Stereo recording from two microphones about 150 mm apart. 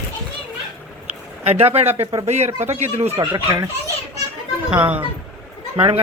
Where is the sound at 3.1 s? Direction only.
25° right (ahead or behind).